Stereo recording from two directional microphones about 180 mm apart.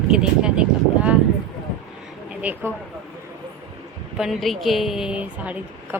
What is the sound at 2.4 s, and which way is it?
Speech, 10° right (ahead or behind).